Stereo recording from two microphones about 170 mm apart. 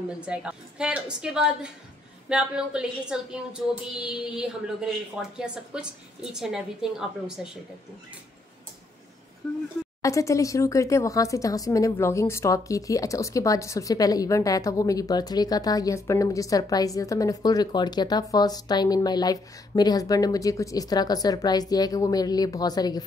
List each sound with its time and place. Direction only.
0.2 s a woman's voice: 5° right (ahead or behind)
10.0 s speech: 20° left (ahead or behind)